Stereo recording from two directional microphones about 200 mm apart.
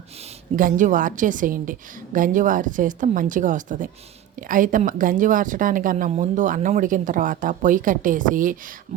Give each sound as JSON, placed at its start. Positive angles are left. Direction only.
{"t": 0.5, "sound": "a woman's voice", "side_deg": -40}